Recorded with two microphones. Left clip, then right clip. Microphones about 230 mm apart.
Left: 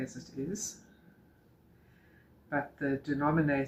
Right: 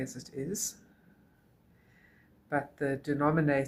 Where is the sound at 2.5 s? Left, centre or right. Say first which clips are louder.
Right 1 dB; right.